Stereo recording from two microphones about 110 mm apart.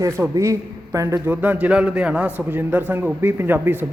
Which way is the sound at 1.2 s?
15° right (ahead or behind).